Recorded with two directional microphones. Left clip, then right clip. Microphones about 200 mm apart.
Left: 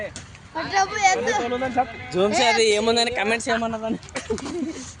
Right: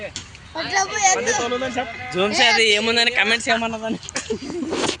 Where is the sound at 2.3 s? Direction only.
5° right (ahead or behind).